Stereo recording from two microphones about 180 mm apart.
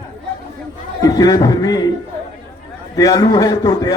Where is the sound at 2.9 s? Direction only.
20° left (ahead or behind).